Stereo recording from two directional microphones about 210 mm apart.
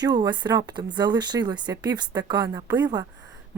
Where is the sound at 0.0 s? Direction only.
20° right (ahead or behind).